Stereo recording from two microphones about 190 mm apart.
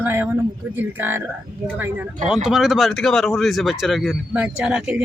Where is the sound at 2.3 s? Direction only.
5° right (ahead or behind).